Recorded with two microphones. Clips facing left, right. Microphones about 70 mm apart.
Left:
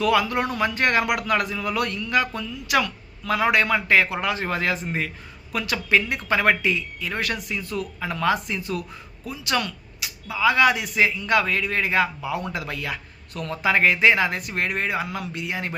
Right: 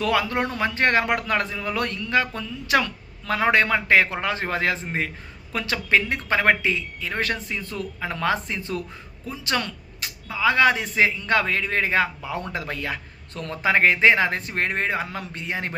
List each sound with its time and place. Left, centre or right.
0.0 s speech: right
9.2 s a sound: right
10.3 s speech: right